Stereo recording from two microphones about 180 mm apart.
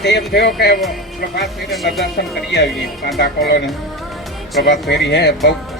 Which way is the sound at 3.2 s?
65° left (ahead or behind).